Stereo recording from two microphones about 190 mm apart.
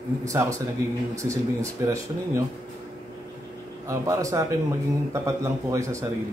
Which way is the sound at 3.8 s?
15° right (ahead or behind).